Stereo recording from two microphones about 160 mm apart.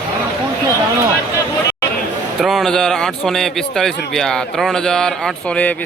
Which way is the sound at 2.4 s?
Centre (ahead or behind).